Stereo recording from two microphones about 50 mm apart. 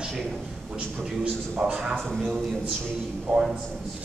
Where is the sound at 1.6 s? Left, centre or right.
Centre.